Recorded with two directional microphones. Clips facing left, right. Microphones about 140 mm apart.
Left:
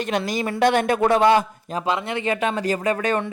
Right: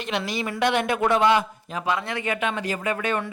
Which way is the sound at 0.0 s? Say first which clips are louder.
Left 4 dB; 45° left (ahead or behind).